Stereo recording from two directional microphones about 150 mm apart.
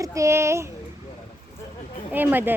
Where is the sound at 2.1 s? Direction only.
10° right (ahead or behind).